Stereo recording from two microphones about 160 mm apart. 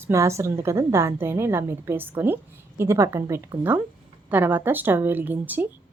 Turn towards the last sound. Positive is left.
turn(degrees=-10)  # may be behind; listen again after turning